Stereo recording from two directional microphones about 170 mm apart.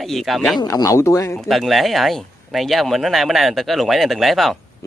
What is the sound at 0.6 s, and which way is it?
Speech, 20° left (ahead or behind).